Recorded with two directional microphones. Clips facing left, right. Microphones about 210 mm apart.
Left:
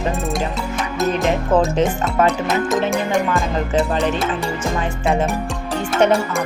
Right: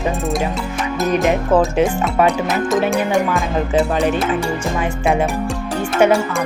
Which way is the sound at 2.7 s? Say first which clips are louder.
Right 4 dB; centre (ahead or behind).